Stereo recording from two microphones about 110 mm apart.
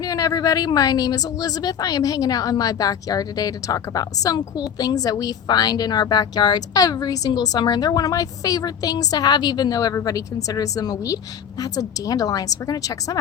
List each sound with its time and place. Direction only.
0.0 s a woman's voice: 30° left (ahead or behind)